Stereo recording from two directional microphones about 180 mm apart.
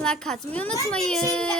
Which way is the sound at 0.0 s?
5° left (ahead or behind).